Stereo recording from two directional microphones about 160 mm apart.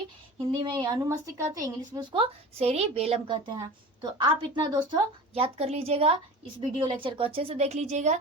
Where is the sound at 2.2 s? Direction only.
40° right (ahead or behind).